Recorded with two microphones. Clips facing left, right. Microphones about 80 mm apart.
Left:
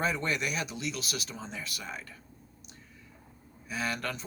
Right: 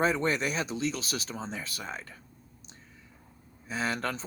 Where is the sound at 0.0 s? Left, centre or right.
Right.